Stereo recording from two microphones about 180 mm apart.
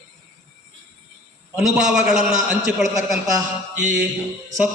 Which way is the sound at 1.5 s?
5° right (ahead or behind).